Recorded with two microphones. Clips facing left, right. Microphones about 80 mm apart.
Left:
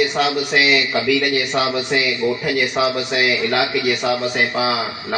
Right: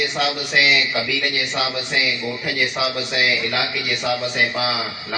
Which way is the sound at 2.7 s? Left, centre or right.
Left.